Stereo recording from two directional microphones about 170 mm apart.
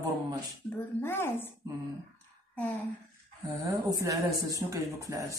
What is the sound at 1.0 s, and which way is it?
Speech, 15° left (ahead or behind).